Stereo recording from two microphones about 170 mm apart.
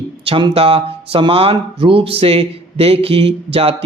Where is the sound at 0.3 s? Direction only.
30° right (ahead or behind).